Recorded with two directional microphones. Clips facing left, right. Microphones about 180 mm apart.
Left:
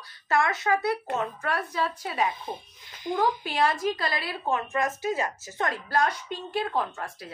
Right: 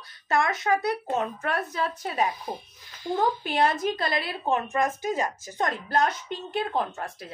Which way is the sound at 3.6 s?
20° right (ahead or behind).